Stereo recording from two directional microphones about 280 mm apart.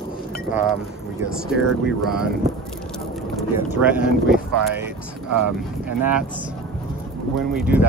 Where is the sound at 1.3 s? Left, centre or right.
Centre.